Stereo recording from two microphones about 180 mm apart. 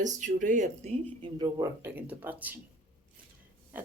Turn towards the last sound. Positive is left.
turn(degrees=-10)  # may be behind; listen again after turning